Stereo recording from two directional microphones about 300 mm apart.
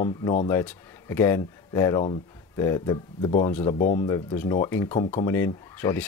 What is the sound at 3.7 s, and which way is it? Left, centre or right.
Speech, left.